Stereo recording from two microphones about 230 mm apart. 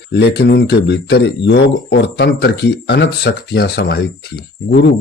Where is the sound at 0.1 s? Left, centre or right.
Left.